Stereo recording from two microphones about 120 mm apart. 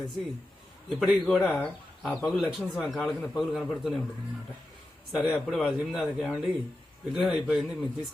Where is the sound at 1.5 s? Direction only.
10° left (ahead or behind).